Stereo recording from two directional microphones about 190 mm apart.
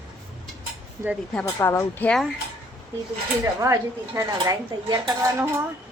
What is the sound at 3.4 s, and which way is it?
A woman's voice, 15° right (ahead or behind).